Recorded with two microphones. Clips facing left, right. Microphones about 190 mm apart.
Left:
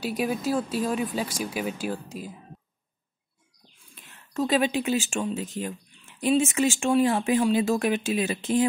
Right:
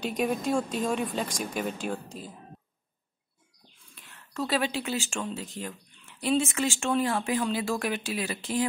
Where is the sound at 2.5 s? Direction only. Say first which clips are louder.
Left 2 dB; centre (ahead or behind).